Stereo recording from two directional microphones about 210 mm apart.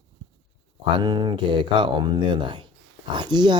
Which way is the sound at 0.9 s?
20° right (ahead or behind).